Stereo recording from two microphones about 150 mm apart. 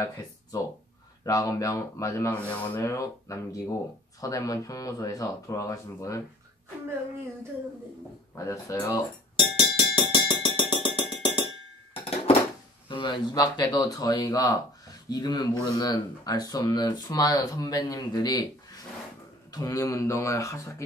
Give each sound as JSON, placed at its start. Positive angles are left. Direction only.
{"t": 1.2, "sound": "speech", "side_deg": 20}
{"t": 2.3, "sound": "speech", "side_deg": 10}
{"t": 2.8, "sound": "speech", "side_deg": 20}
{"t": 8.4, "sound": "music", "side_deg": 20}
{"t": 12.0, "sound": "a sound", "side_deg": 40}
{"t": 12.8, "sound": "speech", "side_deg": 35}
{"t": 19.5, "sound": "speech", "side_deg": 20}